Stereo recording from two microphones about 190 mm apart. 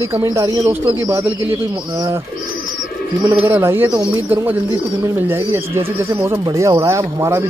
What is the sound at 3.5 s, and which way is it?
Speech, 10° right (ahead or behind).